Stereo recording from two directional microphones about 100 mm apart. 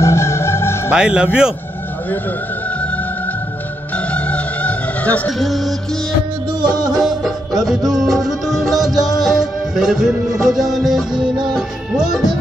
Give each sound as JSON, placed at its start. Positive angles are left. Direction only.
{"t": 0.0, "sound": "music", "side_deg": 25}
{"t": 0.9, "sound": "speech", "side_deg": -10}
{"t": 3.9, "sound": "music", "side_deg": 15}
{"t": 5.4, "sound": "music", "side_deg": 0}
{"t": 6.6, "sound": "music", "side_deg": -45}
{"t": 6.9, "sound": "music", "side_deg": -5}